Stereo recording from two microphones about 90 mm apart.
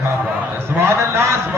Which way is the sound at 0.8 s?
30° right (ahead or behind).